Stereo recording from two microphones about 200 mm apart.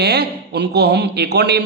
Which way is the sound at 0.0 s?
55° right (ahead or behind).